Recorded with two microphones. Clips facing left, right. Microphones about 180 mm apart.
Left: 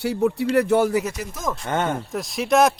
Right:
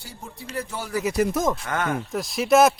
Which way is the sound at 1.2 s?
50° right (ahead or behind).